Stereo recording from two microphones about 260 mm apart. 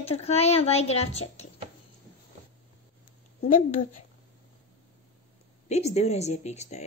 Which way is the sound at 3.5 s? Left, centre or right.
Left.